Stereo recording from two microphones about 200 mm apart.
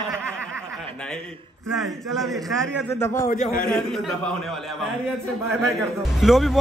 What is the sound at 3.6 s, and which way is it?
Speech, centre (ahead or behind).